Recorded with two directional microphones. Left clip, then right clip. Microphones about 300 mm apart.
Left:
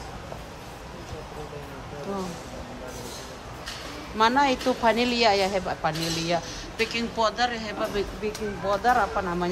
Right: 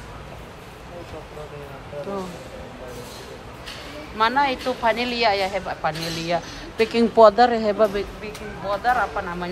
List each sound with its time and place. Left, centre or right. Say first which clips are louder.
4.2 s a woman's voice: right 1 dB; centre